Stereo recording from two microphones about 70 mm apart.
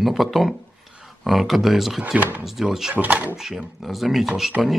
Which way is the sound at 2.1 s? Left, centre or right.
Right.